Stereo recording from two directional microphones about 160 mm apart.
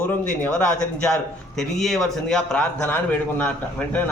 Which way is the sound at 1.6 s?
Centre (ahead or behind).